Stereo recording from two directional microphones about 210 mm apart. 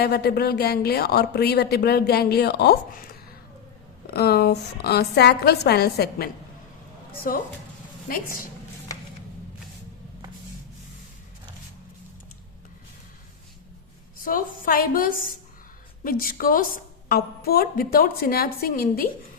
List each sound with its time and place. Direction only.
0.0 s speech: 50° left (ahead or behind)
14.3 s a woman's voice: 40° left (ahead or behind)